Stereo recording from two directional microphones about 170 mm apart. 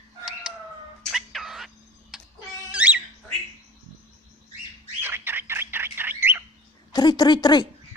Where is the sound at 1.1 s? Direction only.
Centre (ahead or behind).